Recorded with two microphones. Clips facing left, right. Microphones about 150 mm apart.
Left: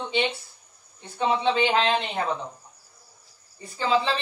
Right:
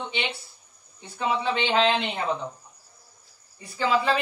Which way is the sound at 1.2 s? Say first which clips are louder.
Left 3 dB; 25° left (ahead or behind).